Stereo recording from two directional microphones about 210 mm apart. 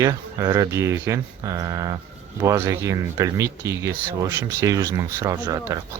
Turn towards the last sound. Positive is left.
turn(degrees=-15)  # may be behind; listen again after turning